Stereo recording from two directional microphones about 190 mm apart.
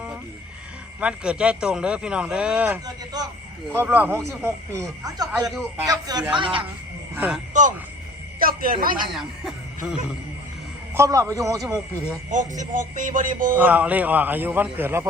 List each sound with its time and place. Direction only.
0.9 s a man's voice: 5° right (ahead or behind)
2.8 s speech: 20° right (ahead or behind)
3.8 s speech: 10° right (ahead or behind); by 6.6 s 25° right (ahead or behind)
7.2 s a man's voice: 5° right (ahead or behind)
8.4 s a man's voice: 50° right (ahead or behind)
9.1 s speech: centre (ahead or behind)
10.9 s speech: 15° right (ahead or behind)
12.3 s speech: 40° right (ahead or behind)
13.6 s speech: 10° right (ahead or behind)